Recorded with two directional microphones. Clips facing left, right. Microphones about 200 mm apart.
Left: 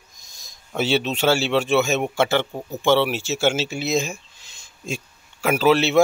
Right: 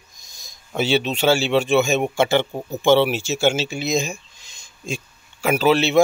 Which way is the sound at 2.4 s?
15° right (ahead or behind).